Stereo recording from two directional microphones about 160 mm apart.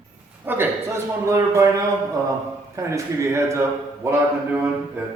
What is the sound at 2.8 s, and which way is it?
Speech, 20° right (ahead or behind).